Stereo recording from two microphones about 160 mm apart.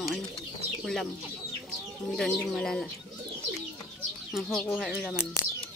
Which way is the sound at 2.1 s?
5° left (ahead or behind).